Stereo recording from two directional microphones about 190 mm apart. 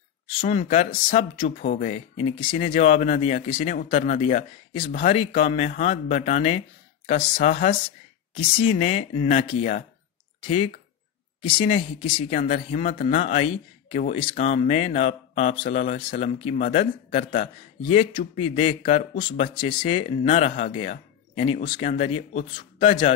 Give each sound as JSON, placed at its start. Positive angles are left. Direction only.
{"t": 0.4, "sound": "speech", "side_deg": 35}
{"t": 8.4, "sound": "speech", "side_deg": 30}